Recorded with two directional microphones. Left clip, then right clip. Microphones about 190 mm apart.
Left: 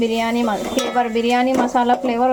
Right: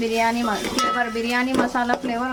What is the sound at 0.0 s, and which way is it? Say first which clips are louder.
Speech: left 2 dB; 15° left (ahead or behind).